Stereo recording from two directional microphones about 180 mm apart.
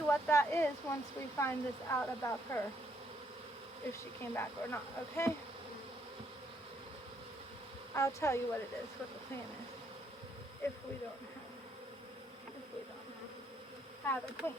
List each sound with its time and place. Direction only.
0.1 s speech: 15° left (ahead or behind)
4.2 s speech: 10° left (ahead or behind)
7.9 s speech: 15° left (ahead or behind)
14.0 s speech: 10° left (ahead or behind)